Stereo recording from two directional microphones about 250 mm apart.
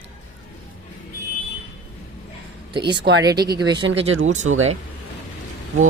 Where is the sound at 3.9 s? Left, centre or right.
Right.